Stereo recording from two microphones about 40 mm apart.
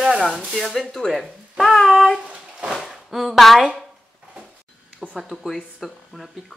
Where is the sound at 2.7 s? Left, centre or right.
Centre.